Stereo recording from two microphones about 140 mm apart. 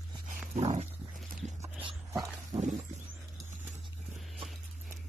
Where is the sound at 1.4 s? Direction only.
55° right (ahead or behind).